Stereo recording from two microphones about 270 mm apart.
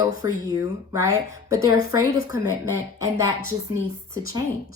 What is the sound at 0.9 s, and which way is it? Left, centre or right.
Speech, centre.